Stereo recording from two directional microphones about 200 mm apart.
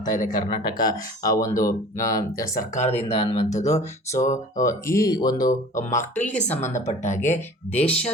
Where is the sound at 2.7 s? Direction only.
35° left (ahead or behind).